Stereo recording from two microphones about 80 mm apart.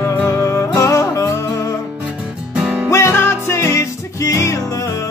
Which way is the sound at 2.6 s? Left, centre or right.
Centre.